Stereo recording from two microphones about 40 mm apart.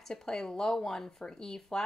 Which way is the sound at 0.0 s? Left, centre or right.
Centre.